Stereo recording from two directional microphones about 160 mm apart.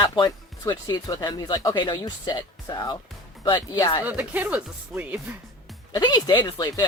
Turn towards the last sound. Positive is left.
turn(degrees=25)  # may be behind; listen again after turning